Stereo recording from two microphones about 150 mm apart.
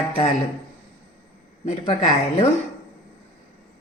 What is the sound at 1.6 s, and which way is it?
Speech, 45° left (ahead or behind).